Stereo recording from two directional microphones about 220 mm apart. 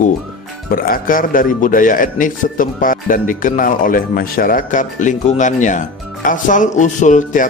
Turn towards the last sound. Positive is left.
turn(degrees=35)  # may be behind; listen again after turning